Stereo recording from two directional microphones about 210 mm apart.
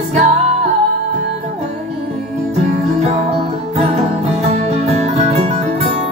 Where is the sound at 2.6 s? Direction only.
30° right (ahead or behind).